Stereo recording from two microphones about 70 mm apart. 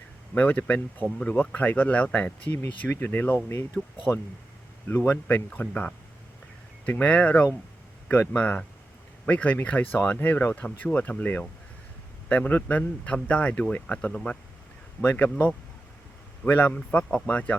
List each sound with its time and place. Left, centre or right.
0.3 s speech: left
4.1 s speech: left